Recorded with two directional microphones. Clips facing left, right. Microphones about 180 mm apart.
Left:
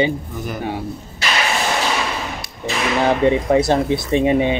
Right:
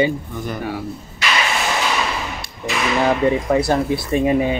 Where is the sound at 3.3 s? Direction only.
25° left (ahead or behind).